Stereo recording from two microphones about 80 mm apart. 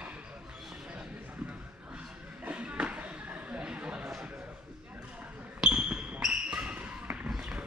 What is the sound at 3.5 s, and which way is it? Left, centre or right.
Chatter, centre.